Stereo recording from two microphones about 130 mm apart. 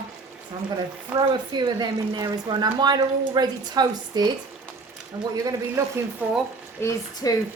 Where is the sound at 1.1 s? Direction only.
35° right (ahead or behind).